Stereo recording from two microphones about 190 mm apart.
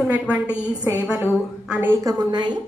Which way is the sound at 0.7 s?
20° right (ahead or behind).